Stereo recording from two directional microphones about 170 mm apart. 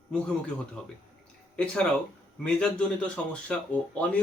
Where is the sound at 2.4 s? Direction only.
5° left (ahead or behind).